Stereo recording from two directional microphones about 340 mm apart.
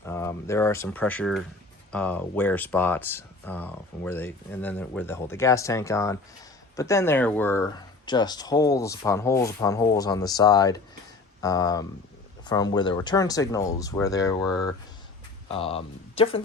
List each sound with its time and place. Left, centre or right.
0.0 s speech: centre